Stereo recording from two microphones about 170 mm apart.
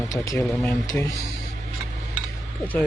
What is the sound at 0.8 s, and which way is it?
Speech, 20° left (ahead or behind).